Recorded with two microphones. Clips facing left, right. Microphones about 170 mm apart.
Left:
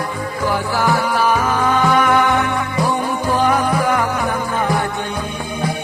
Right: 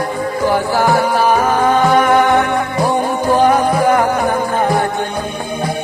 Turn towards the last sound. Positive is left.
turn(degrees=-40)  # may be behind; listen again after turning